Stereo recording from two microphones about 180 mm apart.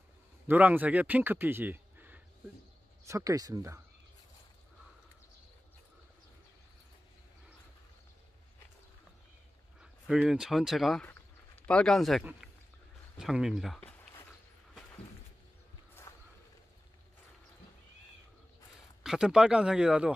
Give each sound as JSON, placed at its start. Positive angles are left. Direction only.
{"t": 0.5, "sound": "speech", "side_deg": -10}
{"t": 9.8, "sound": "speech", "side_deg": -5}
{"t": 19.0, "sound": "speech", "side_deg": -5}